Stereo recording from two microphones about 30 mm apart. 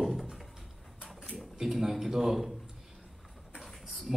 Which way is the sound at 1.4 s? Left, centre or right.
Centre.